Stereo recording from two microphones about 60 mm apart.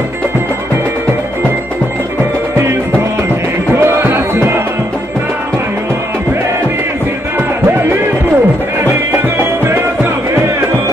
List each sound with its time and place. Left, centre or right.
3.7 s music: right